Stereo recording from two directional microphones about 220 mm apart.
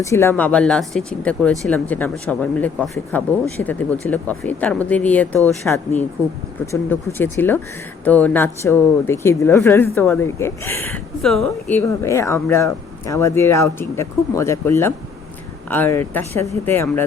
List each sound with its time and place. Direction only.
0.0 s speech: 10° left (ahead or behind)